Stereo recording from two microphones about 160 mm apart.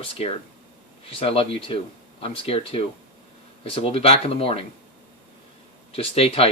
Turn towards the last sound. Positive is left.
turn(degrees=35)  # may be behind; listen again after turning